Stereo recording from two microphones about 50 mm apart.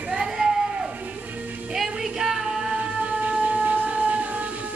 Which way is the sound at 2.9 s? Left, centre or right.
Right.